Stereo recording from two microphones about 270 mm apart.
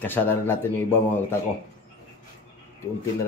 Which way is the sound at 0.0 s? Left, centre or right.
Centre.